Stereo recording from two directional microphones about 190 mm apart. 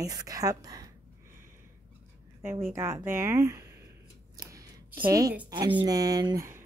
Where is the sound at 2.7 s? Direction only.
15° right (ahead or behind).